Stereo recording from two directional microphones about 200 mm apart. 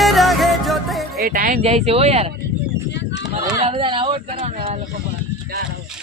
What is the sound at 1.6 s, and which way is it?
Speech, 30° right (ahead or behind).